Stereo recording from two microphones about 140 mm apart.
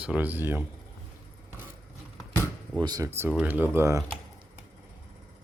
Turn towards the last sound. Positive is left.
turn(degrees=-20)  # may be behind; listen again after turning